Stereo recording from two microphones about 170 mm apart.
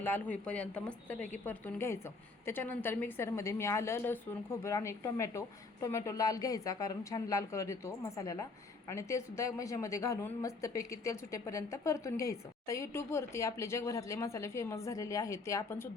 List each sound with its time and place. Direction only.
0.0 s a woman's voice: 10° left (ahead or behind)